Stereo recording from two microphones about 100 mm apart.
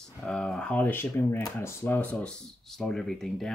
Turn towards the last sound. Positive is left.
turn(degrees=5)  # may be behind; listen again after turning